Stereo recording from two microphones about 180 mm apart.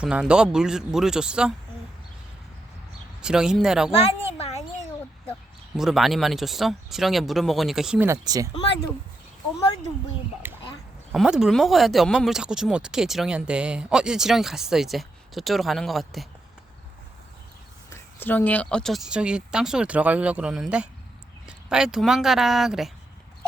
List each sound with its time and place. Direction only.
0.0 s speech: 5° right (ahead or behind)
3.2 s speech: 5° right (ahead or behind)
4.3 s a sound: 35° left (ahead or behind)
5.7 s speech: centre (ahead or behind)
8.0 s speech: 20° right (ahead or behind)
10.4 s a sound: 10° right (ahead or behind)
11.1 s speech: 5° right (ahead or behind)
18.2 s speech: 10° left (ahead or behind)